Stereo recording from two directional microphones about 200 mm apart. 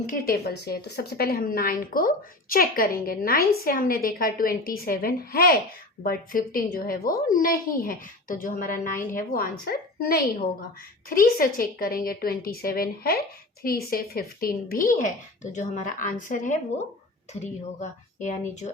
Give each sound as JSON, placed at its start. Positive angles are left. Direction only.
{"t": 0.1, "sound": "a woman's voice", "side_deg": 50}